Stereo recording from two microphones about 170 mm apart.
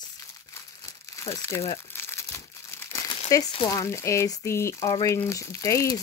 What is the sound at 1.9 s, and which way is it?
Crumpling, 15° left (ahead or behind).